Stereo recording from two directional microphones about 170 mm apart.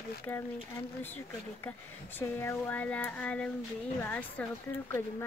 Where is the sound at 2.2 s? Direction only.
15° left (ahead or behind).